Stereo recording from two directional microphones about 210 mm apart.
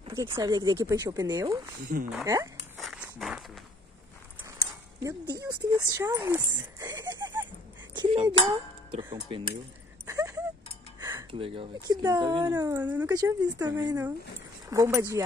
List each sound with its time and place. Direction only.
0.0 s speech: 25° right (ahead or behind)
1.9 s speech: 45° right (ahead or behind)
2.2 s speech: 15° right (ahead or behind)
2.8 s walk: centre (ahead or behind)
5.0 s speech: 15° right (ahead or behind)
7.9 s cutlery: 25° right (ahead or behind)
8.5 s speech: 25° right (ahead or behind)
10.0 s a sound: 15° right (ahead or behind)
11.0 s music: 15° right (ahead or behind)
11.3 s speech: 25° right (ahead or behind)